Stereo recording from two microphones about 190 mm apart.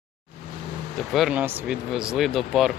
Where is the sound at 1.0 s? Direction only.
Centre (ahead or behind).